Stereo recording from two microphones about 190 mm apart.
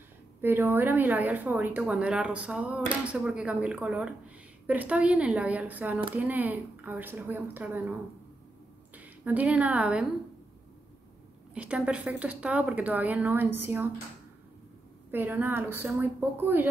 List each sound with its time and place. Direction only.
0.4 s a woman's voice: 10° right (ahead or behind)
11.5 s a woman's voice: 5° right (ahead or behind)
15.0 s a woman's voice: 10° right (ahead or behind)